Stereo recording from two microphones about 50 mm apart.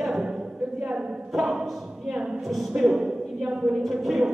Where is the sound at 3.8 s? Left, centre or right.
Centre.